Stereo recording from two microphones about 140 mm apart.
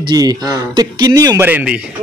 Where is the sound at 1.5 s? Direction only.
10° right (ahead or behind).